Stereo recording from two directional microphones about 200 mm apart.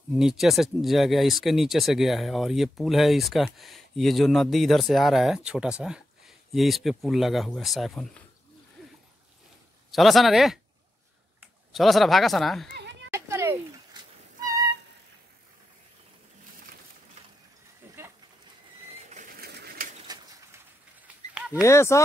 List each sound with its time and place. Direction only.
0.2 s speech: centre (ahead or behind)
9.8 s speech: centre (ahead or behind)
11.7 s speech: centre (ahead or behind)
12.7 s children playing: 60° right (ahead or behind)
13.1 s a sound: 15° right (ahead or behind)
14.0 s cat: 20° right (ahead or behind)
17.8 s a sound: 10° right (ahead or behind)
19.4 s pigeon: 50° right (ahead or behind)
20.1 s bird: 20° right (ahead or behind)
21.5 s speech: 15° left (ahead or behind)